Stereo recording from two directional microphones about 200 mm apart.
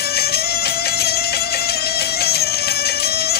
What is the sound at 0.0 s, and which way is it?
Music, 50° left (ahead or behind).